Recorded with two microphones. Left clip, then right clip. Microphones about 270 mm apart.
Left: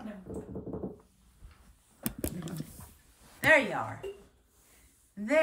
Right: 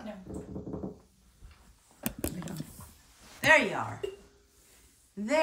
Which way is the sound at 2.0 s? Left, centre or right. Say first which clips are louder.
Right 1 dB; centre.